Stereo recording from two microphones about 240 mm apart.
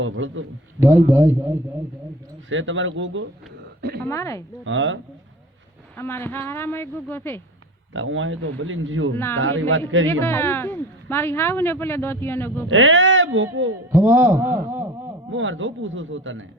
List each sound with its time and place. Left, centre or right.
0.0 s a man's voice: right
1.1 s a man's voice: centre
2.5 s a man's voice: right
3.8 s speech: right
4.0 s speech: centre
4.6 s a man's voice: right
6.0 s speech: centre
7.9 s a man's voice: right
9.1 s speech: centre
9.4 s a man's voice: right
10.1 s speech: centre
12.6 s a man's voice: right
13.9 s a man's voice: centre
15.3 s a man's voice: right